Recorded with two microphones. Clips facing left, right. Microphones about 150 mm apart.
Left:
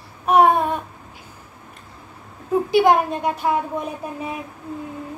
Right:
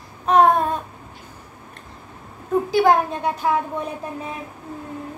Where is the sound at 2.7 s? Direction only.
10° left (ahead or behind).